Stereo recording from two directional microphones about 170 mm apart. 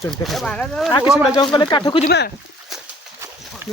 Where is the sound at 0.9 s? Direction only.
25° left (ahead or behind).